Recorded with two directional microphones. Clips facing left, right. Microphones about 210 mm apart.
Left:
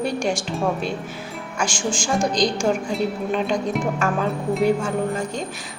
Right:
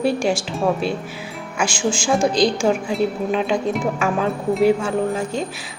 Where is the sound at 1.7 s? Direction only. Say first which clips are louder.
Right 3 dB; 45° left (ahead or behind).